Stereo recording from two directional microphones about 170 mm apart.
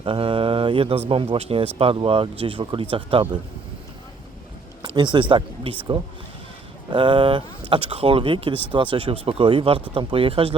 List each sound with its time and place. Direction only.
0.0 s speech: 30° right (ahead or behind)
4.8 s a sound: 25° right (ahead or behind)
5.3 s speech: 30° right (ahead or behind)